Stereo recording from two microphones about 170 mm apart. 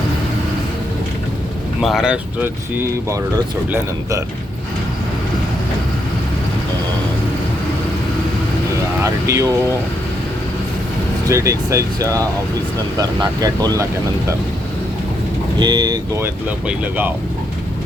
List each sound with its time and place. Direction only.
1.8 s speech: centre (ahead or behind)
9.2 s speech: 20° right (ahead or behind)
11.3 s speech: 20° right (ahead or behind)
15.5 s speech: 25° right (ahead or behind)